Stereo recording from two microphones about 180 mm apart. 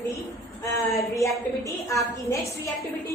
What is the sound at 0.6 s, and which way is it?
A woman's voice, 15° left (ahead or behind).